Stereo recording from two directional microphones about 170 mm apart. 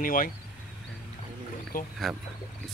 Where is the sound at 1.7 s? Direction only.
55° left (ahead or behind).